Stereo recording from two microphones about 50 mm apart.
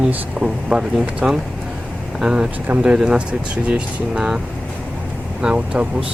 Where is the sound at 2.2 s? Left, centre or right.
Centre.